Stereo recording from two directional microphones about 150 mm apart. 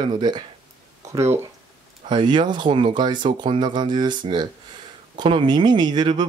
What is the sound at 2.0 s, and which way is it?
Speech, 30° right (ahead or behind).